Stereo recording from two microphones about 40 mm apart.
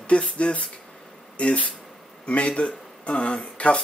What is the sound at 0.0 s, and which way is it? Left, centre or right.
Speech, left.